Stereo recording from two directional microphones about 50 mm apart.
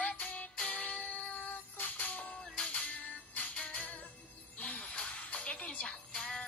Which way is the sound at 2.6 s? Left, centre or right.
Left.